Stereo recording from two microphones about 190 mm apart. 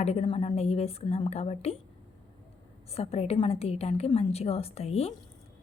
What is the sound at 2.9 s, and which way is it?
A woman's voice, 30° left (ahead or behind).